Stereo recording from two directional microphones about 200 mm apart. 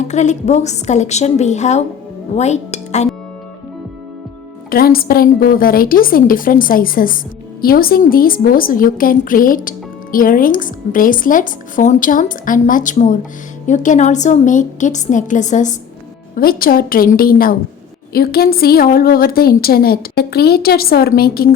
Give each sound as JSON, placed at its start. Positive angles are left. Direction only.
{"t": 0.0, "sound": "a woman's voice", "side_deg": 35}
{"t": 4.7, "sound": "a woman's voice", "side_deg": 50}